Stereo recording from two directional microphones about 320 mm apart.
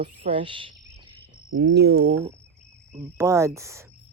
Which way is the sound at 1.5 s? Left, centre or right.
Right.